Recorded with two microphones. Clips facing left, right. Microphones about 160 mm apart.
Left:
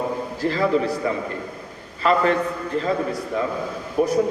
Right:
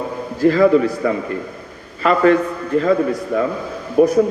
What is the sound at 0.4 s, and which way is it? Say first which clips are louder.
Speech: right 8 dB; 50° right (ahead or behind).